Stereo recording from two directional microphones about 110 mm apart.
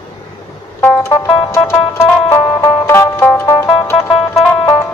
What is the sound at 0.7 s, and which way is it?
Music, 25° left (ahead or behind).